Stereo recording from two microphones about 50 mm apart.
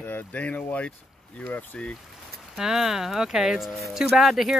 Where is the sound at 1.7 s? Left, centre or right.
Left.